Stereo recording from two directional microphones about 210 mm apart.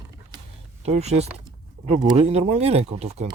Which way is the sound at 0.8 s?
30° right (ahead or behind).